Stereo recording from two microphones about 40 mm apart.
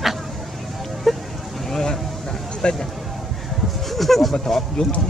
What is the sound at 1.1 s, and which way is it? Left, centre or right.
Vehicle, centre.